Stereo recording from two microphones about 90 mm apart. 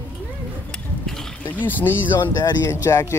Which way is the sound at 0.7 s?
5° left (ahead or behind).